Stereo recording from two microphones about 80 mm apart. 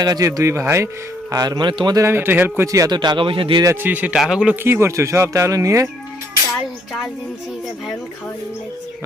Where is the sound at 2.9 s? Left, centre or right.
Right.